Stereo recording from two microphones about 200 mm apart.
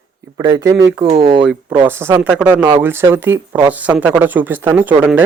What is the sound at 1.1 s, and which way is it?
Speech, 30° right (ahead or behind).